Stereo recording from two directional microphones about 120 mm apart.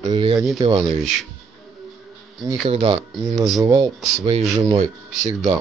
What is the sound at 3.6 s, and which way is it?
Speech, 35° right (ahead or behind).